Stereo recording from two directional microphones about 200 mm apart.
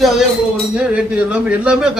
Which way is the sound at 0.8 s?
5° right (ahead or behind).